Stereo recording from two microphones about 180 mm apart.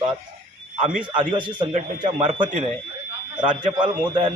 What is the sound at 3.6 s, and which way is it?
Speech, 25° right (ahead or behind).